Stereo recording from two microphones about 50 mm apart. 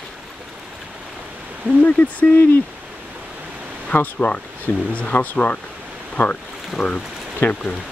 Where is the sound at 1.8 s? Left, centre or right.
Left.